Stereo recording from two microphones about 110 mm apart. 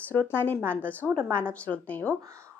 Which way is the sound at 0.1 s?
20° left (ahead or behind).